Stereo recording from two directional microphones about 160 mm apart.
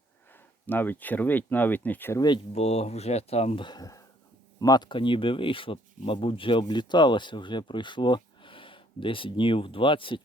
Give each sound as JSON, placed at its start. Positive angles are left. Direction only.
{"t": 0.7, "sound": "speech", "side_deg": 10}
{"t": 2.5, "sound": "speech", "side_deg": 40}